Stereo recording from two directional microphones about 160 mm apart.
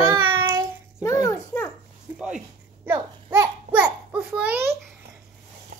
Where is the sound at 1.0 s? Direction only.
20° left (ahead or behind).